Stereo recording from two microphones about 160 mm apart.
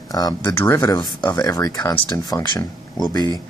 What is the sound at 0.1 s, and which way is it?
Speech, 25° left (ahead or behind).